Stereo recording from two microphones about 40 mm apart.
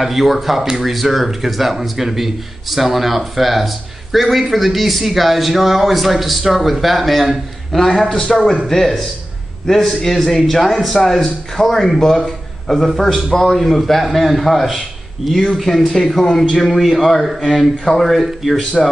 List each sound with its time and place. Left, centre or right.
0.0 s a man's voice: centre
16.6 s speech: centre